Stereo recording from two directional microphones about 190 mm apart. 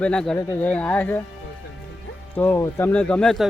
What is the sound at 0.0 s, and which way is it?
Speech, 5° left (ahead or behind).